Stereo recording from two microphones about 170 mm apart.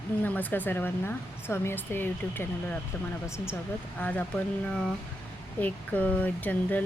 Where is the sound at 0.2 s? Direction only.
10° left (ahead or behind).